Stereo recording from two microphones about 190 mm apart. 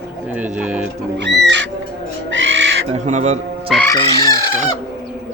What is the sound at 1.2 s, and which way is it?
Music, 65° right (ahead or behind).